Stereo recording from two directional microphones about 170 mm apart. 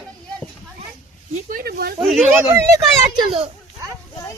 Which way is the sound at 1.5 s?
60° right (ahead or behind).